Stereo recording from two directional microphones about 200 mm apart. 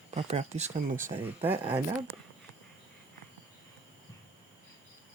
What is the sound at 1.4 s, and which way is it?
Speech, 10° right (ahead or behind).